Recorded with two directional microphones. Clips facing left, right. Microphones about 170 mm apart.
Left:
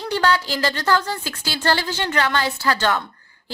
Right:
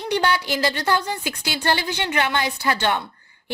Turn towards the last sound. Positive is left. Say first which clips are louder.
# left 1 dB
turn(degrees=-20)  # may be behind; listen again after turning